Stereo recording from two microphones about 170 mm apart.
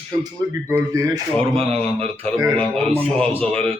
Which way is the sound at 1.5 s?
35° right (ahead or behind).